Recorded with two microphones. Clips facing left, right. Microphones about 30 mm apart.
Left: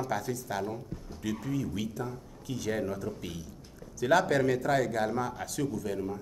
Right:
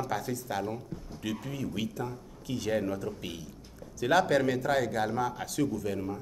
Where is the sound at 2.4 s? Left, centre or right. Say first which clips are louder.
Right 1 dB; right.